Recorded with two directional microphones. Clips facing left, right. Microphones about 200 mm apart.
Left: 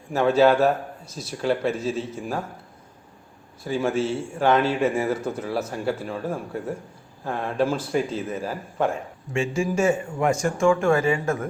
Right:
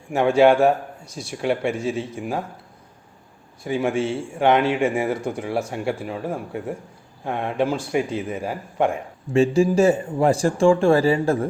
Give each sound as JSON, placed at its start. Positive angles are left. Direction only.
{"t": 0.1, "sound": "speech", "side_deg": -15}
{"t": 3.6, "sound": "speech", "side_deg": -15}
{"t": 9.3, "sound": "a man's voice", "side_deg": -35}